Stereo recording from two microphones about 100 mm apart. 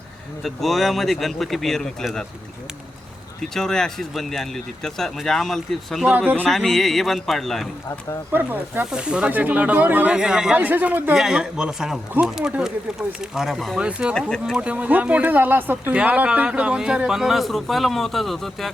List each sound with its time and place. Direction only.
0.4 s speech: centre (ahead or behind)
3.5 s speech: 5° left (ahead or behind)
6.1 s speech: 15° right (ahead or behind)
6.5 s speech: centre (ahead or behind)
8.3 s speech: 20° right (ahead or behind)
11.1 s speech: 5° right (ahead or behind)
14.2 s speech: 5° left (ahead or behind)
14.5 s speech: 10° right (ahead or behind)